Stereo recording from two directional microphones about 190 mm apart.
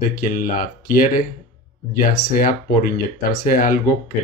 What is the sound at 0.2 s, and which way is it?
Speech, 45° left (ahead or behind).